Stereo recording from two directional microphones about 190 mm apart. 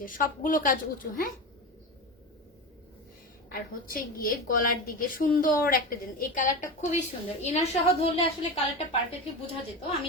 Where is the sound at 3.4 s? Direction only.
50° left (ahead or behind); by 8.3 s 30° left (ahead or behind).